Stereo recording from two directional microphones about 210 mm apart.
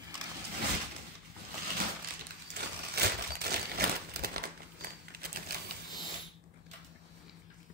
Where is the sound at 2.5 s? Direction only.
50° right (ahead or behind).